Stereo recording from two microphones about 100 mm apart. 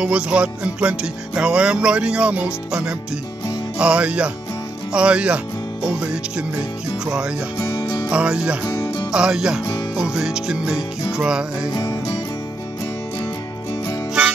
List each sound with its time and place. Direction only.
0.0 s music: 10° right (ahead or behind)
7.5 s music: 30° left (ahead or behind)
8.1 s music: 10° right (ahead or behind)
11.7 s music: 40° left (ahead or behind)